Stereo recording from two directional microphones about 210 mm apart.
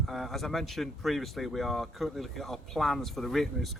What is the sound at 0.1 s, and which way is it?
Speech, centre (ahead or behind).